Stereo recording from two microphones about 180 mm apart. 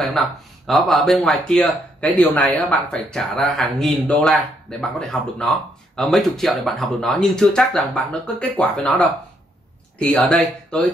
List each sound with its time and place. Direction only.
0.0 s speech: centre (ahead or behind)